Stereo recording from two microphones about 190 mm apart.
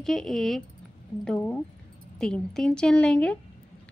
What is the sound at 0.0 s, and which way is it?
Speech, centre (ahead or behind).